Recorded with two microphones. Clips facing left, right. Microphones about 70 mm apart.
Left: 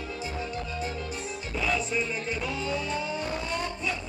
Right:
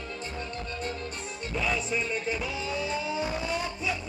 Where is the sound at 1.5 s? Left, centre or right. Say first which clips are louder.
Left 1 dB; centre.